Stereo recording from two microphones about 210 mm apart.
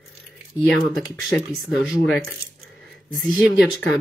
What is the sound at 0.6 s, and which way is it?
Speech, centre (ahead or behind).